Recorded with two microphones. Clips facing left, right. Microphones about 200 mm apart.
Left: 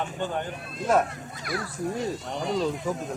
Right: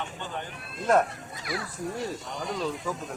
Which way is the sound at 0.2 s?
45° left (ahead or behind).